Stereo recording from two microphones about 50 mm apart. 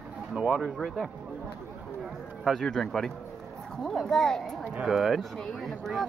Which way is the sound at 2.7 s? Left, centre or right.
Centre.